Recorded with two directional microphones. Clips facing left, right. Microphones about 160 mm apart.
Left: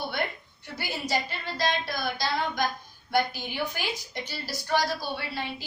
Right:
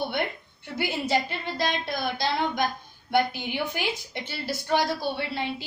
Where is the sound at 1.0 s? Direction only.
20° right (ahead or behind).